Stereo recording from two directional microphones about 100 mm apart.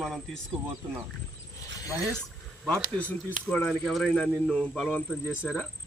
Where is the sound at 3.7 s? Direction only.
Centre (ahead or behind).